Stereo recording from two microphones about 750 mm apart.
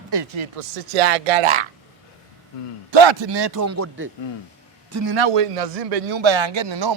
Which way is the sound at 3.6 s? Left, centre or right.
Centre.